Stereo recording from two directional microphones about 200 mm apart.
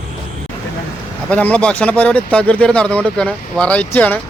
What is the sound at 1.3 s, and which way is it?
Speech, 5° left (ahead or behind).